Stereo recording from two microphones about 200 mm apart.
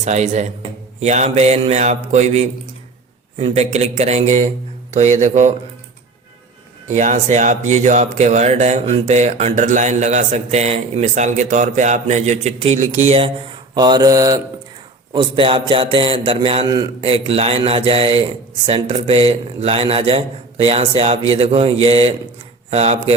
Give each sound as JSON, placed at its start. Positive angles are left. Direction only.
{"t": 0.0, "sound": "speech", "side_deg": -35}
{"t": 6.8, "sound": "speech", "side_deg": -35}